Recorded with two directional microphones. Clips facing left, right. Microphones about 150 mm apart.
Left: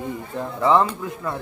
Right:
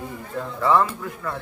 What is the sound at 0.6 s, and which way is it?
Speech, 20° left (ahead or behind).